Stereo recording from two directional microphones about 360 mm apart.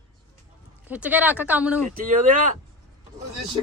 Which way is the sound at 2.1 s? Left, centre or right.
Right.